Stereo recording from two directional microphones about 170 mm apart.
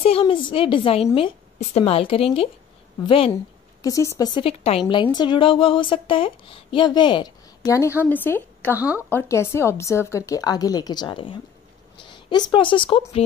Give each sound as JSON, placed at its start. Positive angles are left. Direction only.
{"t": 0.0, "sound": "a woman's voice", "side_deg": 35}
{"t": 3.8, "sound": "speech", "side_deg": 20}
{"t": 8.7, "sound": "speech", "side_deg": -10}
{"t": 9.1, "sound": "a woman's voice", "side_deg": 15}